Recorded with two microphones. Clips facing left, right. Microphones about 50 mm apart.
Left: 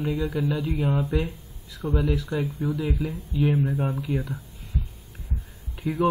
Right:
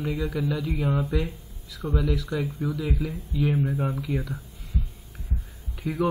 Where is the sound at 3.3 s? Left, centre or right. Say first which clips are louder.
Left 2 dB; left.